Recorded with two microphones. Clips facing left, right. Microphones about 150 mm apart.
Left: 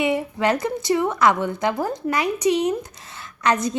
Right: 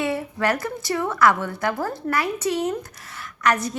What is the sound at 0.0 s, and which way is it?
A woman's voice, 15° left (ahead or behind).